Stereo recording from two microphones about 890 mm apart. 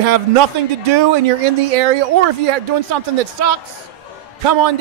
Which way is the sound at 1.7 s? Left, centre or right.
Right.